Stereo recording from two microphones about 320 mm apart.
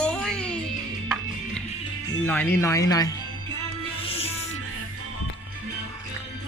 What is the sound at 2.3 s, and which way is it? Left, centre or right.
Speech, centre.